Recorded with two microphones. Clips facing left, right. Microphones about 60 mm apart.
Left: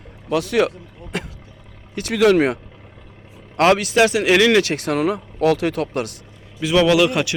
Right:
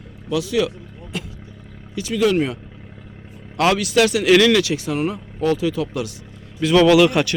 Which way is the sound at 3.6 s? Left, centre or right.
Left.